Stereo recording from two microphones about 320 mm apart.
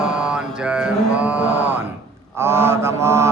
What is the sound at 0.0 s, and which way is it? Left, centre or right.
Mantra, centre.